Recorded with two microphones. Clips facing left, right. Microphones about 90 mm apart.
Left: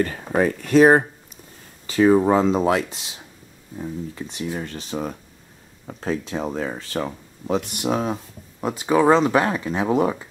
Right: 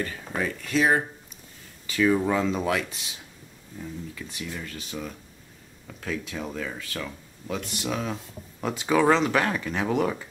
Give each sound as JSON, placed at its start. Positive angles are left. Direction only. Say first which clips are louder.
{"t": 0.0, "sound": "speech", "louder": "left 9 dB", "side_deg": 45}
{"t": 1.9, "sound": "speech", "louder": "left 7 dB", "side_deg": 35}